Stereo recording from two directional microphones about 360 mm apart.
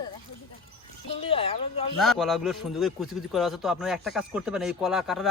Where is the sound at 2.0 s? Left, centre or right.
Centre.